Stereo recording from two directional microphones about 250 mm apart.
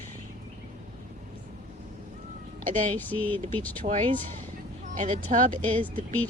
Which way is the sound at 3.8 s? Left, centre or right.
Right.